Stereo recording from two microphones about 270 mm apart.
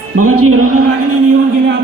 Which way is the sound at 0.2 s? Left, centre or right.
Right.